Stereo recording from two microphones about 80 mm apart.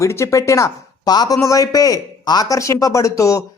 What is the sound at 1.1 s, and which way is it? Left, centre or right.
Speech, left.